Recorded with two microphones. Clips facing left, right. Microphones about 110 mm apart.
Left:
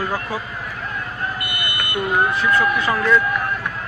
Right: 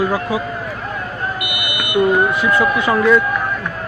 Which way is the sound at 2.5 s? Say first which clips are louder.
Right 3 dB; 20° right (ahead or behind).